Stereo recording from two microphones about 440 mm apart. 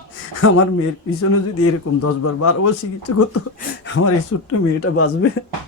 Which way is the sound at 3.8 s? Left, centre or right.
Left.